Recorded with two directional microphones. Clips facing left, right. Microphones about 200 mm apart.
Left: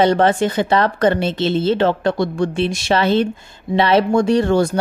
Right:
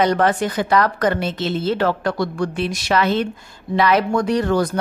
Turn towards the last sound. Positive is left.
turn(degrees=25)  # may be behind; listen again after turning